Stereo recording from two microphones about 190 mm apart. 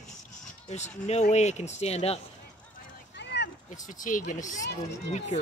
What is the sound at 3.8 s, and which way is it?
Speech, 40° left (ahead or behind).